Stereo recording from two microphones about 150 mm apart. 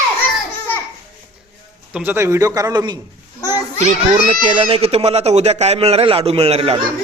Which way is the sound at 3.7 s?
50° right (ahead or behind).